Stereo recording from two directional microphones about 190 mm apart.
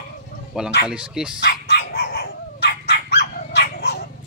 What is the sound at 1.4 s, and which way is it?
Dog, 60° left (ahead or behind).